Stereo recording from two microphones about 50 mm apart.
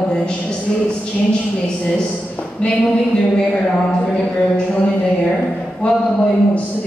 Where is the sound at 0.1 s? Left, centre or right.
Centre.